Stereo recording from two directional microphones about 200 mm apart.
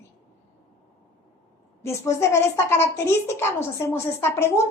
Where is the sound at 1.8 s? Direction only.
15° left (ahead or behind).